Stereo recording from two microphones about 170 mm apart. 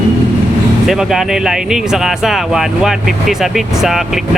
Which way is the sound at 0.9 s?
5° right (ahead or behind).